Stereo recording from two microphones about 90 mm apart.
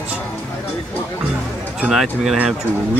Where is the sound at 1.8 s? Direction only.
5° right (ahead or behind).